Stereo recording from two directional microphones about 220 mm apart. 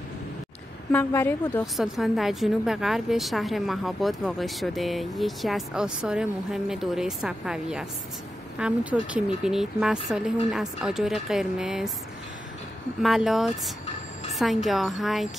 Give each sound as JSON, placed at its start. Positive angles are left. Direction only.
{"t": 0.9, "sound": "a woman's voice", "side_deg": 10}
{"t": 1.8, "sound": "a woman's voice", "side_deg": 0}
{"t": 13.0, "sound": "a woman's voice", "side_deg": 0}